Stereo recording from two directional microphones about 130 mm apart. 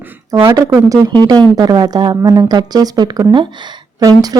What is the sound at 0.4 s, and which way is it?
Speech, 25° right (ahead or behind).